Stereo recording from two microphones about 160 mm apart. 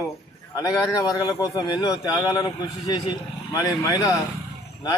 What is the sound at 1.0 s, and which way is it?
A man's voice, 20° left (ahead or behind).